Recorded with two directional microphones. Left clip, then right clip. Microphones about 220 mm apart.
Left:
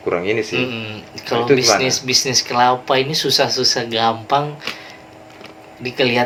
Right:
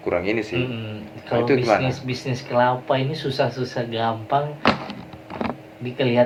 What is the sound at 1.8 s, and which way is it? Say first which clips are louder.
Speech: left 10 dB; 45° left (ahead or behind).